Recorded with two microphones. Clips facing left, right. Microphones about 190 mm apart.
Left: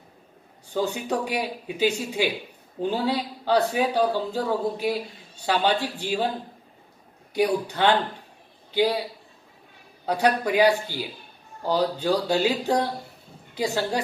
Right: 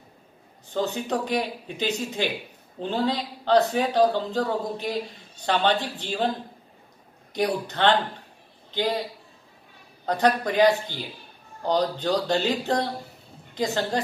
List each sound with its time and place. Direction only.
0.7 s speech: 10° left (ahead or behind)
7.3 s speech: 10° left (ahead or behind)
10.0 s speech: 10° left (ahead or behind)